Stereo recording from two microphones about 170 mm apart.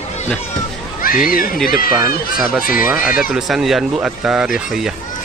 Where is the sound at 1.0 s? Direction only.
55° left (ahead or behind).